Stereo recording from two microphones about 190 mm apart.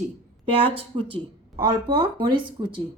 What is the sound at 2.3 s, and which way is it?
Speech, 25° right (ahead or behind).